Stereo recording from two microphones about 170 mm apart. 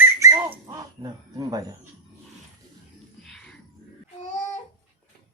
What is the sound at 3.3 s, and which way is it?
Music, 5° left (ahead or behind).